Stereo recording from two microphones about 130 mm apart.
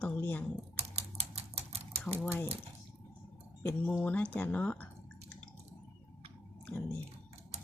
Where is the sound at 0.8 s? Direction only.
55° right (ahead or behind).